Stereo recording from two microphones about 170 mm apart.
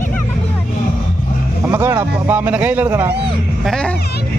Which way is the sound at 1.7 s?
10° right (ahead or behind).